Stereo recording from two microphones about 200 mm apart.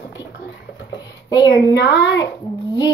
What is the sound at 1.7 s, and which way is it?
Speech, 60° left (ahead or behind).